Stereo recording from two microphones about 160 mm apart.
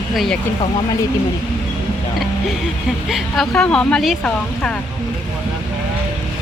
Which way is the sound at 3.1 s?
Centre (ahead or behind).